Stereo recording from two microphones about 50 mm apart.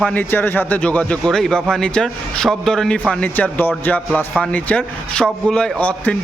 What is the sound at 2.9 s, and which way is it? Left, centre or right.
Speech, left.